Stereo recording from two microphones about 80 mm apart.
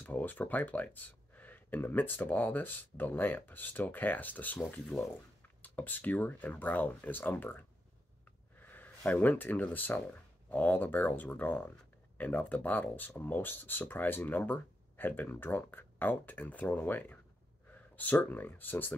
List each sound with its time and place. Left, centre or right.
0.0 s speech: left
4.8 s speech: centre
5.6 s speech: left